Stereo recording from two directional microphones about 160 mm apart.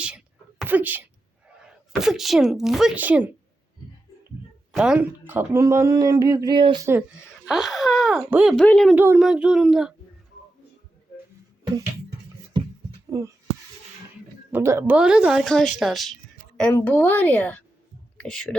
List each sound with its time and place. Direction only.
0.6 s speech: 10° right (ahead or behind)
4.7 s speech: 5° right (ahead or behind); by 6.8 s 30° right (ahead or behind)
6.8 s speech: 10° right (ahead or behind); by 9.0 s 5° left (ahead or behind)
9.0 s speech: 10° right (ahead or behind)
13.1 s a sound: 20° right (ahead or behind)
14.5 s speech: 15° right (ahead or behind)
14.9 s a woman's voice: 5° right (ahead or behind)